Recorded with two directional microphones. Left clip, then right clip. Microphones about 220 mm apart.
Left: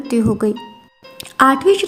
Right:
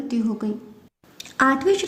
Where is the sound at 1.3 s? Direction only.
20° left (ahead or behind).